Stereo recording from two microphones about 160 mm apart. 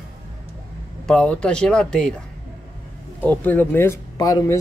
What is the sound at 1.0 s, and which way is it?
Speech, 5° left (ahead or behind).